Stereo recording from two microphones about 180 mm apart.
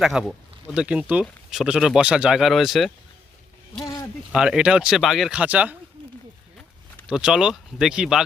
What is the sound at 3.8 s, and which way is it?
Speech, 25° left (ahead or behind).